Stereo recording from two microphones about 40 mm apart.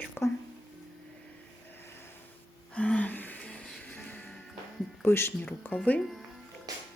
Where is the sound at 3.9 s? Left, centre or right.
Left.